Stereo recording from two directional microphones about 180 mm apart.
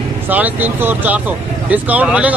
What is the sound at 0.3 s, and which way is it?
Speech, 10° right (ahead or behind).